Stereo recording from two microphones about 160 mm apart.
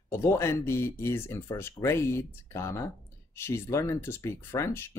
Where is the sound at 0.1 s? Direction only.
15° left (ahead or behind).